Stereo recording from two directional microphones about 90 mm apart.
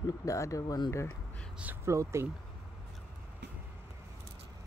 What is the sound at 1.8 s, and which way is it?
Speech, 30° right (ahead or behind).